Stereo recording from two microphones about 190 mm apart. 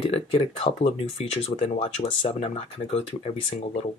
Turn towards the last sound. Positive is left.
turn(degrees=30)  # may be behind; listen again after turning